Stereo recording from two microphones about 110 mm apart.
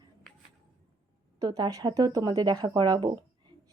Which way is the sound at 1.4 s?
40° right (ahead or behind).